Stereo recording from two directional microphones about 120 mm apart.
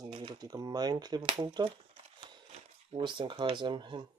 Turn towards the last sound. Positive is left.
turn(degrees=-40)  # may be behind; listen again after turning